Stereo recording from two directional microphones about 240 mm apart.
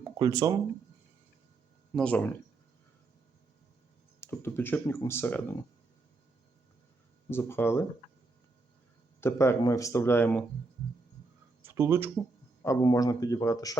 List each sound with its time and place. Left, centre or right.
0.2 s speech: centre
2.0 s speech: centre
4.2 s speech: centre
7.3 s speech: centre
9.2 s speech: centre
11.6 s speech: centre
12.6 s speech: centre